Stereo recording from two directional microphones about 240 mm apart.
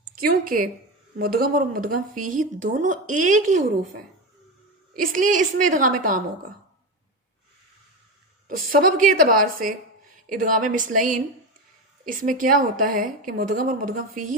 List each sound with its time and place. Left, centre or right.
0.2 s a woman's voice: right
8.4 s a woman's voice: right